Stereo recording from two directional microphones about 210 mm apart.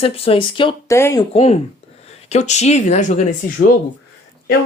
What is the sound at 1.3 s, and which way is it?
Speech, 30° left (ahead or behind).